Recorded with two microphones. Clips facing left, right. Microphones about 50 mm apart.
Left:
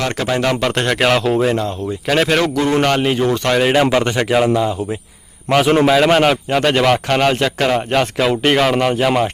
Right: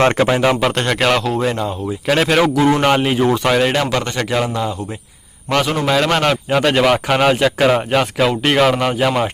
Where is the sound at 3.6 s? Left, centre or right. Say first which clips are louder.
Left 3 dB; centre.